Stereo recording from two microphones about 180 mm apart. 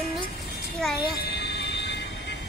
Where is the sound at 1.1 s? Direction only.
65° left (ahead or behind).